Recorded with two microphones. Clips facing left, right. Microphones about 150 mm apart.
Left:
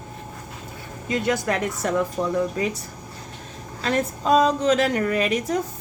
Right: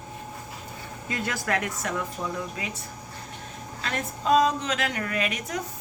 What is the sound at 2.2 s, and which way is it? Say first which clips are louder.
Speech: left 7 dB; 75° left (ahead or behind).